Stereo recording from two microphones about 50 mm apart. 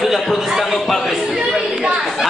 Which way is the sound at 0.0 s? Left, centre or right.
Centre.